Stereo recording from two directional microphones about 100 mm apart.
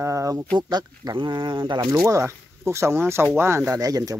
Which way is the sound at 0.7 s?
45° right (ahead or behind).